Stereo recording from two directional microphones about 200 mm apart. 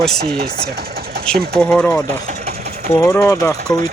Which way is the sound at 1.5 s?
5° left (ahead or behind).